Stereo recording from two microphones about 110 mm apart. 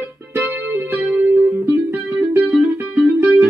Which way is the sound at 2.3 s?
10° right (ahead or behind).